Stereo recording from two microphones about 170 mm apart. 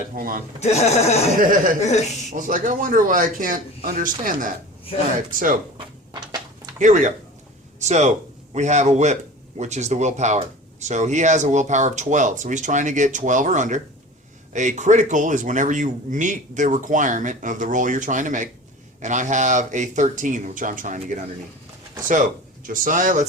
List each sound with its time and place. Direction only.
0.2 s speech: 55° right (ahead or behind)
0.6 s speech: 40° left (ahead or behind)
1.4 s speech: 55° right (ahead or behind)
1.8 s speech: 40° left (ahead or behind)
2.3 s speech: 50° right (ahead or behind)
5.7 s a sound: 25° right (ahead or behind)
6.7 s speech: 45° right (ahead or behind)
22.6 s speech: 55° right (ahead or behind)